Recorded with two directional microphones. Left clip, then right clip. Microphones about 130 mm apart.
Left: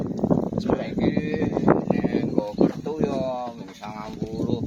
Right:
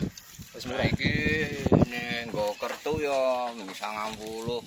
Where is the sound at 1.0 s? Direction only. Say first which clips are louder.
Left 2 dB; 35° left (ahead or behind).